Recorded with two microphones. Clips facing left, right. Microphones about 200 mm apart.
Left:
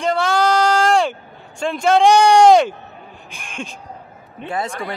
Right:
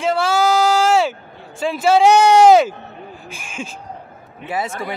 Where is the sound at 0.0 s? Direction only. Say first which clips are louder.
Right 1 dB; centre (ahead or behind).